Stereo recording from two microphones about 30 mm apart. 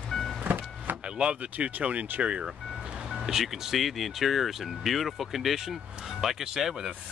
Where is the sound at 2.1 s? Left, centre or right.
Right.